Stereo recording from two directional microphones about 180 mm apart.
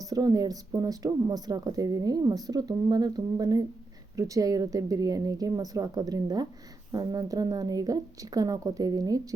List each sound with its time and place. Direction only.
0.0 s speech: 20° right (ahead or behind)